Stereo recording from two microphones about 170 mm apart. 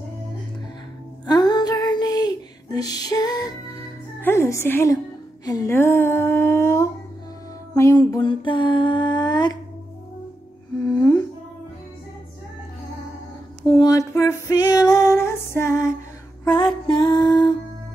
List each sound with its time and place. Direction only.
1.2 s female singing: 25° left (ahead or behind)
4.2 s a woman's voice: 15° left (ahead or behind)
5.4 s a sound: 20° left (ahead or behind)
10.9 s humming: 5° left (ahead or behind)
13.8 s female singing: 20° left (ahead or behind)
16.4 s music: 30° left (ahead or behind)